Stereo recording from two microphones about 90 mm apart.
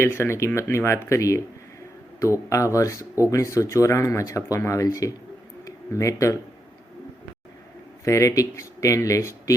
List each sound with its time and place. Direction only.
0.0 s speech: 30° left (ahead or behind)
8.0 s speech: 35° left (ahead or behind)